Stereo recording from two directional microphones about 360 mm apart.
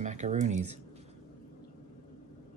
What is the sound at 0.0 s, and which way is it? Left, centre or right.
Speech, centre.